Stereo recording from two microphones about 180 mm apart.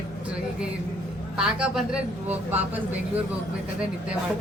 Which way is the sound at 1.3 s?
5° right (ahead or behind).